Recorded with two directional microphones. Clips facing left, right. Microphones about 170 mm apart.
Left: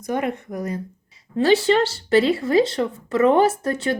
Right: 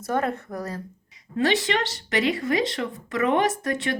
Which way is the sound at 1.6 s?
30° left (ahead or behind).